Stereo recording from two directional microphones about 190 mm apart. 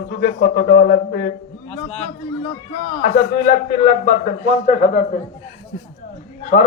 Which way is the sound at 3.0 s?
45° left (ahead or behind).